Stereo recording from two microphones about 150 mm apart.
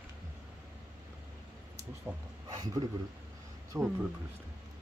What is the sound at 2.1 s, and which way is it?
Speech, 15° right (ahead or behind).